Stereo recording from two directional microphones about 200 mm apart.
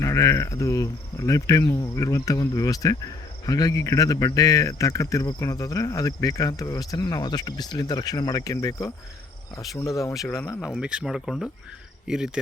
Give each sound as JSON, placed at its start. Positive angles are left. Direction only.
{"t": 0.0, "sound": "speech", "side_deg": 15}
{"t": 10.6, "sound": "speech", "side_deg": -5}